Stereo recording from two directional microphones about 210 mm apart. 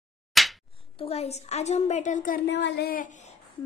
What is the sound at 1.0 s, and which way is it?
A woman's voice, 30° left (ahead or behind).